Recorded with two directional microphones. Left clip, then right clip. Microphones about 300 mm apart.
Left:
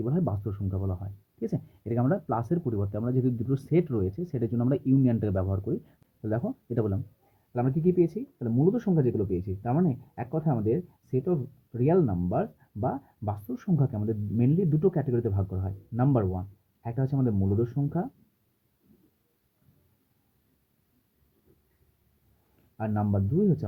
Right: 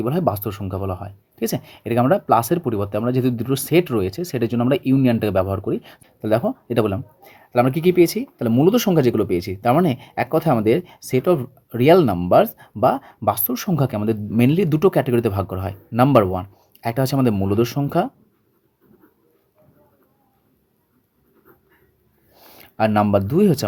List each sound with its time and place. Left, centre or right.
0.0 s speech: centre
22.8 s speech: right